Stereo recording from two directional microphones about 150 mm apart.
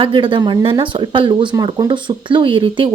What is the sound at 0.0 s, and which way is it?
A woman's voice, 35° right (ahead or behind).